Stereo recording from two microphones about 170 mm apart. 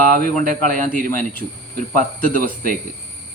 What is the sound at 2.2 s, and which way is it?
Speech, 55° right (ahead or behind).